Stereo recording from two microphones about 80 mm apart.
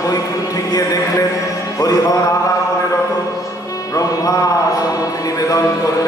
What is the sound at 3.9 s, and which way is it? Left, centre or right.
Music, left.